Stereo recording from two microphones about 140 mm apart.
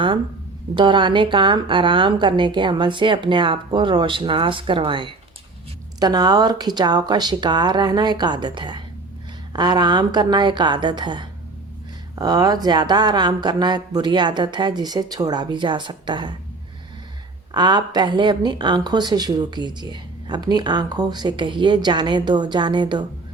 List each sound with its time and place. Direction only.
0.7 s a woman's voice: 35° right (ahead or behind)
17.5 s a woman's voice: 30° right (ahead or behind)